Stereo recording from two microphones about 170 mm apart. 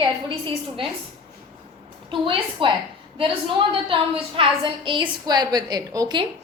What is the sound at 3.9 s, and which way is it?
A woman's voice, 30° right (ahead or behind).